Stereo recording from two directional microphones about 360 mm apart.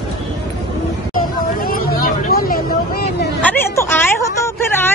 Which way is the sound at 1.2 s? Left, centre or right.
Left.